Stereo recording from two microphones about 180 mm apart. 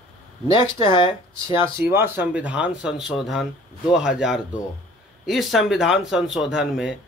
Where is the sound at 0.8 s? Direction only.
25° left (ahead or behind).